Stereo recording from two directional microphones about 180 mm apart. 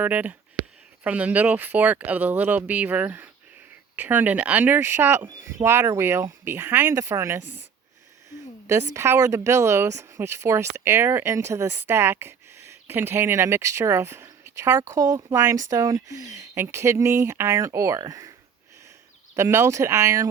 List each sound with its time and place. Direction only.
0.0 s speech: 10° right (ahead or behind)